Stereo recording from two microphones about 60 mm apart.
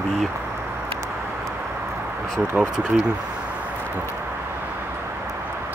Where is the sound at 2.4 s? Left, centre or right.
Right.